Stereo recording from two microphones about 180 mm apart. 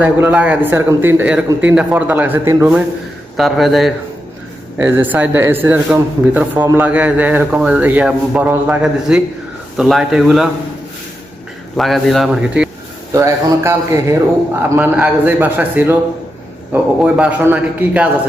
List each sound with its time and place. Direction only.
0.0 s speech: 5° right (ahead or behind)
3.3 s speech: centre (ahead or behind)
4.8 s speech: 10° right (ahead or behind)
11.8 s speech: centre (ahead or behind)
13.1 s speech: 15° right (ahead or behind)